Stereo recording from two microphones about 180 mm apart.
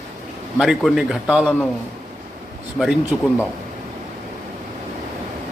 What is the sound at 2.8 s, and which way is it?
Speech, 5° right (ahead or behind).